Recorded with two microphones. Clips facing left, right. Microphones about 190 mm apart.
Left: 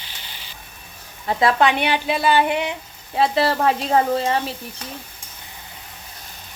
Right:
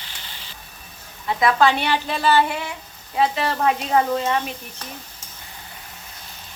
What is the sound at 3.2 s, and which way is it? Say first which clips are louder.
Speech: left 2 dB; 35° left (ahead or behind).